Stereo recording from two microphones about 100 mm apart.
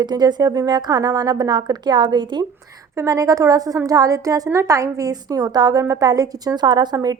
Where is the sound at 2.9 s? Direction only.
35° right (ahead or behind).